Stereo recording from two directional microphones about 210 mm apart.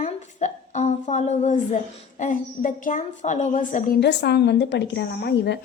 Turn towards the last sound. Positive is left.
turn(degrees=55)  # may be behind; listen again after turning